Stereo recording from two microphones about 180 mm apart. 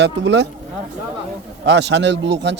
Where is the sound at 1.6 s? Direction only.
75° right (ahead or behind).